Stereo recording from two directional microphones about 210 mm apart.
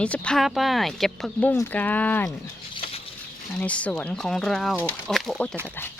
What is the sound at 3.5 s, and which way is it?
Speech, 5° left (ahead or behind).